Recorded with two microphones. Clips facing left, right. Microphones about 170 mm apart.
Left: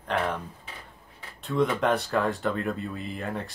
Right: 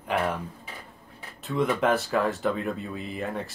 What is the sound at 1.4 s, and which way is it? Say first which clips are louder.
Speech: even; centre (ahead or behind).